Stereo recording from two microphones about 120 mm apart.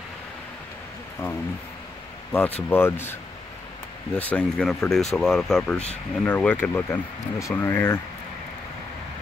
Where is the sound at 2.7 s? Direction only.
20° left (ahead or behind).